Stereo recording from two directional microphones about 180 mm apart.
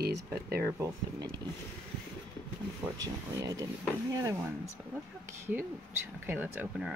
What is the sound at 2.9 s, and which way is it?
Speech, 20° right (ahead or behind).